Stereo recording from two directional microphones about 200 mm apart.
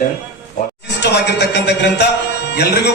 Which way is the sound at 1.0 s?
55° left (ahead or behind).